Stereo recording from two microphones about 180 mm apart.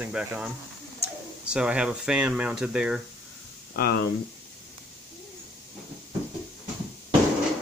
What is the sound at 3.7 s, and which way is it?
Speech, 60° left (ahead or behind).